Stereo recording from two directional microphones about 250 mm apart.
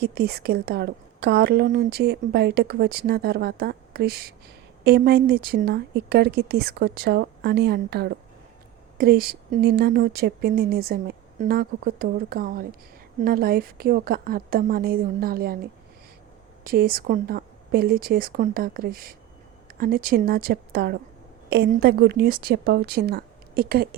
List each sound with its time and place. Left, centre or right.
0.0 s a woman's voice: right
16.6 s a woman's voice: right